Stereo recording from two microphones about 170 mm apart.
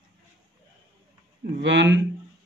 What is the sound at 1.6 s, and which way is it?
Speech, 90° right.